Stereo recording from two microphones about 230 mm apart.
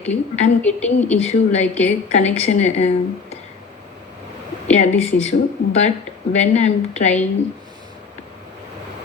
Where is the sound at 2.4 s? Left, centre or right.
Left.